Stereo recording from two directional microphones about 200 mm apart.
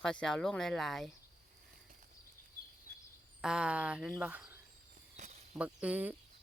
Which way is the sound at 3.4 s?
5° right (ahead or behind).